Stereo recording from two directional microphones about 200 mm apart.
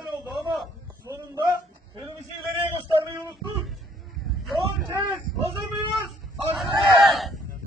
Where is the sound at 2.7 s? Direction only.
15° right (ahead or behind).